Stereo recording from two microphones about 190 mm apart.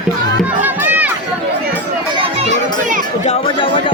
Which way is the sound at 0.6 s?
10° right (ahead or behind).